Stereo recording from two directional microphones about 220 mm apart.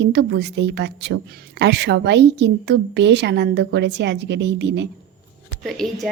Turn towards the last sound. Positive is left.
turn(degrees=0)  # may be behind; listen again after turning